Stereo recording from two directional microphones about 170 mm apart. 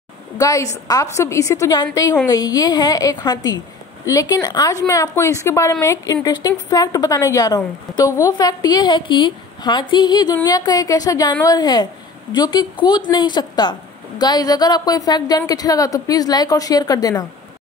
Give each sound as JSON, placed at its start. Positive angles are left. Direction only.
{"t": 0.4, "sound": "a woman's voice", "side_deg": 20}